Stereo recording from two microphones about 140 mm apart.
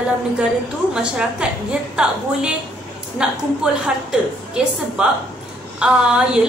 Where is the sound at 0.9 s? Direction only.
5° right (ahead or behind).